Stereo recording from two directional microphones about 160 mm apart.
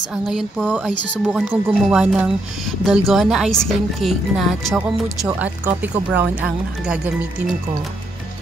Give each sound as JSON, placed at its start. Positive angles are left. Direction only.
{"t": 0.1, "sound": "speech", "side_deg": 0}
{"t": 0.8, "sound": "speech", "side_deg": 0}